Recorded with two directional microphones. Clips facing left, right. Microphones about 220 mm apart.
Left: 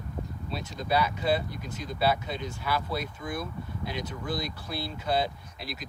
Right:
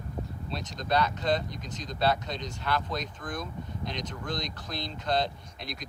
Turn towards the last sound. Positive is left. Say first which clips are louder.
# left 1 dB
turn(degrees=5)  # may be behind; listen again after turning